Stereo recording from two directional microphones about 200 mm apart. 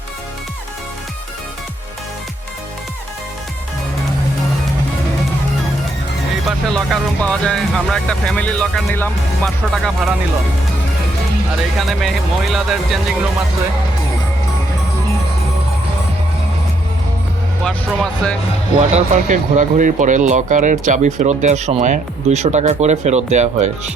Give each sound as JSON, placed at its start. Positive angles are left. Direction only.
{"t": 6.7, "sound": "speech", "side_deg": 0}
{"t": 11.8, "sound": "speech", "side_deg": 0}
{"t": 17.6, "sound": "speech", "side_deg": 5}
{"t": 18.8, "sound": "speech", "side_deg": -35}